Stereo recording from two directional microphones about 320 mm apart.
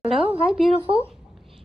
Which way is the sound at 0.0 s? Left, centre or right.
Centre.